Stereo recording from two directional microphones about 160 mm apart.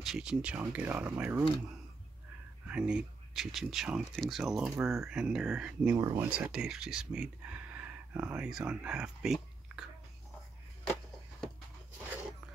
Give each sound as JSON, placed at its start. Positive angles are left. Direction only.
{"t": 0.0, "sound": "speech", "side_deg": -5}
{"t": 2.7, "sound": "speech", "side_deg": -5}
{"t": 5.9, "sound": "speech", "side_deg": -25}
{"t": 6.2, "sound": "speech", "side_deg": -5}